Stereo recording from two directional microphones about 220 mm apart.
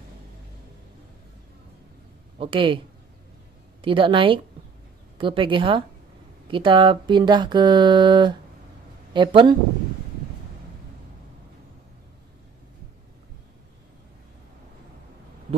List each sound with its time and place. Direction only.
2.3 s speech: 25° right (ahead or behind)
3.8 s speech: 25° right (ahead or behind)